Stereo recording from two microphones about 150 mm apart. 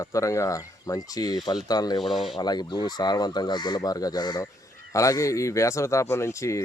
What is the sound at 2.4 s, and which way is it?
Speech, 30° left (ahead or behind).